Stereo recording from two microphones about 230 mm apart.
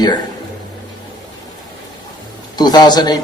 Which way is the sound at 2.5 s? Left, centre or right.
Centre.